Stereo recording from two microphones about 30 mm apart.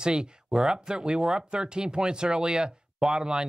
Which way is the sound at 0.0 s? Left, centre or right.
Right.